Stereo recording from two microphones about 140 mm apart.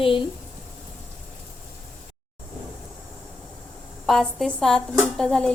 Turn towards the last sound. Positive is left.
turn(degrees=5)  # may be behind; listen again after turning